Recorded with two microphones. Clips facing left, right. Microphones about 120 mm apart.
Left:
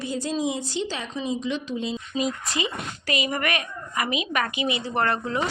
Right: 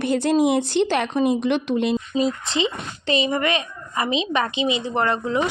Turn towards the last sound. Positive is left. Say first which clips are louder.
# right 3 dB
turn(degrees=-20)  # may be behind; listen again after turning